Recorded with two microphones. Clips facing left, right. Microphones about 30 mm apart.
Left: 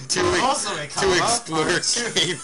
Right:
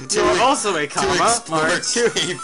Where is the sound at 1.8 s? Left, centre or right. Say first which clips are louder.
Right 3 dB; centre.